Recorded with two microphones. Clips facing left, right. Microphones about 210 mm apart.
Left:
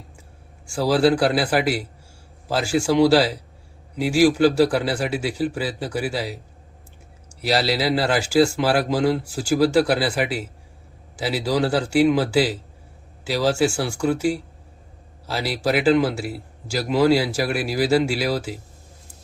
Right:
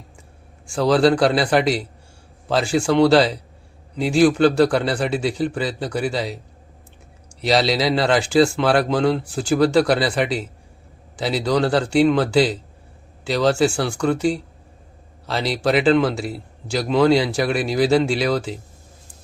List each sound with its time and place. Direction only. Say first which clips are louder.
0.7 s speech: right 2 dB; 5° left (ahead or behind)
7.4 s speech: right 3 dB; 5° left (ahead or behind)